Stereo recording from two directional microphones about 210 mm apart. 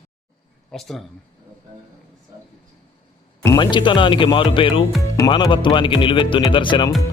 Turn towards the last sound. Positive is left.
turn(degrees=20)  # may be behind; listen again after turning